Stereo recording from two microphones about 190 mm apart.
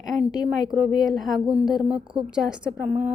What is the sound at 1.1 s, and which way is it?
A woman's voice, centre (ahead or behind).